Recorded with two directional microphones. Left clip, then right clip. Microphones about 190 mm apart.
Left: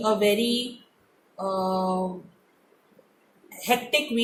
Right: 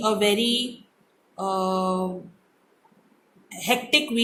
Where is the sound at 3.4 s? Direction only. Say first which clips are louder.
Right 1 dB; 35° right (ahead or behind).